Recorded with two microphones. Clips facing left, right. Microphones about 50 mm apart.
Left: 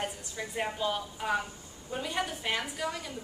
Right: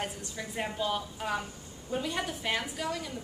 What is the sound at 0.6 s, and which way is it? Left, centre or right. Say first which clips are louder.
A woman's voice: even; centre.